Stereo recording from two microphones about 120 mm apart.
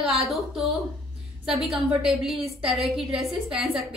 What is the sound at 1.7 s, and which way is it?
A woman's voice, 5° right (ahead or behind).